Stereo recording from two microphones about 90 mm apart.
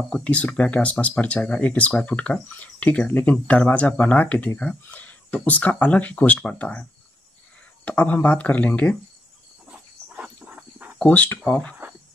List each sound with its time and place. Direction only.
0.1 s speech: 15° left (ahead or behind)
9.7 s a sound: 10° right (ahead or behind)
11.1 s speech: 20° left (ahead or behind)